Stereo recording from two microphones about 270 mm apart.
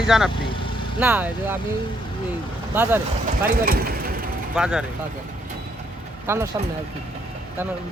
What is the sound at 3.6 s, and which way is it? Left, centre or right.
Speech, right.